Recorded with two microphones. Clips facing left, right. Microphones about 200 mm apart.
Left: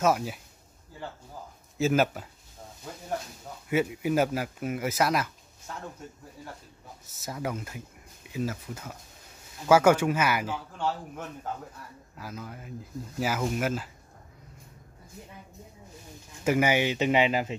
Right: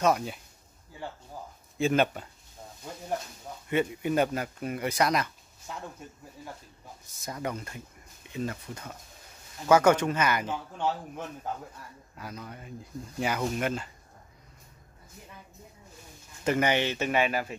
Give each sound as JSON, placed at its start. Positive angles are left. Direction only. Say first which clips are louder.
{"t": 0.0, "sound": "speech", "louder": "even", "side_deg": 5}
{"t": 1.8, "sound": "speech", "louder": "left 1 dB", "side_deg": 5}
{"t": 3.6, "sound": "speech", "louder": "left 1 dB", "side_deg": 5}
{"t": 7.1, "sound": "speech", "louder": "left 1 dB", "side_deg": 5}
{"t": 12.2, "sound": "speech", "louder": "left 1 dB", "side_deg": 0}
{"t": 16.4, "sound": "speech", "louder": "left 2 dB", "side_deg": 10}